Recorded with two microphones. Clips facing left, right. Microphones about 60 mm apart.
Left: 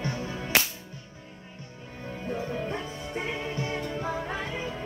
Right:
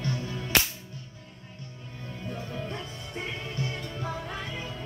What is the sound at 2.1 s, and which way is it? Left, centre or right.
Music, left.